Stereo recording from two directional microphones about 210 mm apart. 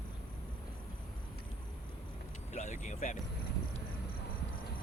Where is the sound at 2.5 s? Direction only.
35° left (ahead or behind).